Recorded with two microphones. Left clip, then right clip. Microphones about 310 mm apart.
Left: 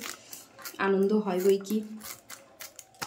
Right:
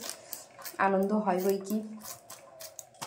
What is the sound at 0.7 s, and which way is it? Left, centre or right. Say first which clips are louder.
Speech: left 1 dB; centre.